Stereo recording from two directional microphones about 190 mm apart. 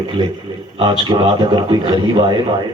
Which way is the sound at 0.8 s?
25° right (ahead or behind).